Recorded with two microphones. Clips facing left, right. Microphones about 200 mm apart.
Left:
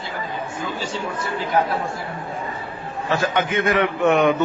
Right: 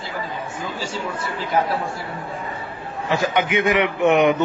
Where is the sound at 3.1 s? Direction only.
15° right (ahead or behind).